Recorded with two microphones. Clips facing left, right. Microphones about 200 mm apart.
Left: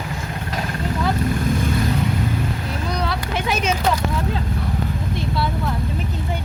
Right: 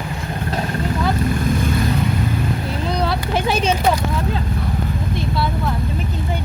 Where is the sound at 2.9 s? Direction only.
30° right (ahead or behind).